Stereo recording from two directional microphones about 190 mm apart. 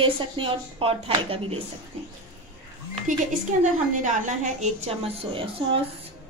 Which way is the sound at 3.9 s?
40° right (ahead or behind).